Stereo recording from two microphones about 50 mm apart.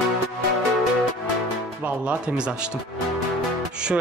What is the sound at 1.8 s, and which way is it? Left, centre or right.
A man's voice, right.